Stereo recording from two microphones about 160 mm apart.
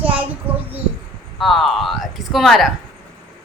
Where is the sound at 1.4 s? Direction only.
Centre (ahead or behind).